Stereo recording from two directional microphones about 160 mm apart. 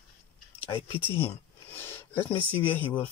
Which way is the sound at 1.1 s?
15° left (ahead or behind).